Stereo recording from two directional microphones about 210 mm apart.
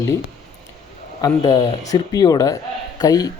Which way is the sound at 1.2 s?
20° left (ahead or behind).